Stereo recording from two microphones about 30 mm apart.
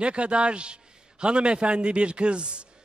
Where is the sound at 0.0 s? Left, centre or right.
Right.